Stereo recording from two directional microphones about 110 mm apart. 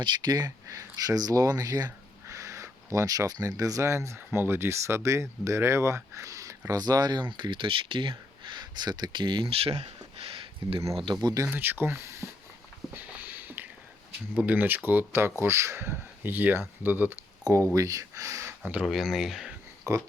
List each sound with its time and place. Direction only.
0.0 s speech: 40° right (ahead or behind)
8.4 s a sound: 40° right (ahead or behind); by 10.8 s 60° right (ahead or behind)
11.0 s speech: 40° right (ahead or behind)
11.5 s speech: 20° right (ahead or behind)
12.9 s a sound: 15° right (ahead or behind)
14.3 s speech: 15° right (ahead or behind)
17.4 s speech: 30° right (ahead or behind)
18.6 s speech: 15° right (ahead or behind)
18.9 s speech: 5° right (ahead or behind)
19.9 s speech: 30° right (ahead or behind)